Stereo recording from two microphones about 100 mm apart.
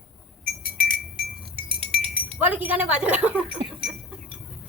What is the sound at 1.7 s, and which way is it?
Chink, 65° right (ahead or behind).